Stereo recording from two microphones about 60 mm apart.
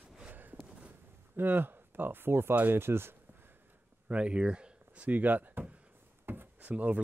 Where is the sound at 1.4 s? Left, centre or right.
Right.